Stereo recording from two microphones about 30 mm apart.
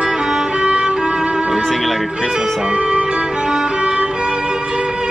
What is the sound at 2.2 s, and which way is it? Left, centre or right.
Speech, centre.